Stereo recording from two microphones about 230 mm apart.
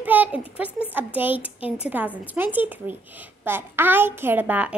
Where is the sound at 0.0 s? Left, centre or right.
Centre.